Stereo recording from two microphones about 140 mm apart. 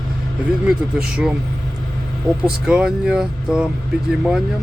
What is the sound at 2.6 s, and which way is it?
Speech, 5° right (ahead or behind).